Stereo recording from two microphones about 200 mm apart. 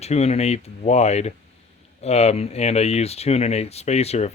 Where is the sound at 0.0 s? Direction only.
30° left (ahead or behind).